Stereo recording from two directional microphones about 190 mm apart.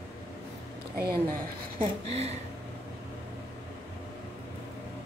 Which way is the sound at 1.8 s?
35° right (ahead or behind).